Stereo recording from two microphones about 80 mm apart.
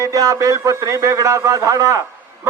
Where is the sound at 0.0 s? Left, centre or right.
Right.